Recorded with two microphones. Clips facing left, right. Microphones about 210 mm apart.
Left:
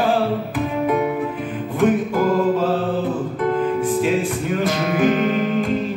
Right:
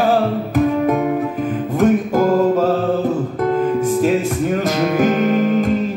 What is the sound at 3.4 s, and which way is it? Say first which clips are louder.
Music: right 3 dB; 45° right (ahead or behind).